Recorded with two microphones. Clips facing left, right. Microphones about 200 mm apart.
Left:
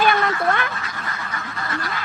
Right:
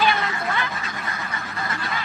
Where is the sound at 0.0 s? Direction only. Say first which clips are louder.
Left 4 dB; 50° left (ahead or behind).